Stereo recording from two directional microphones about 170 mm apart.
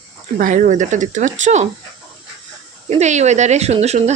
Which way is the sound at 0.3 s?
50° right (ahead or behind).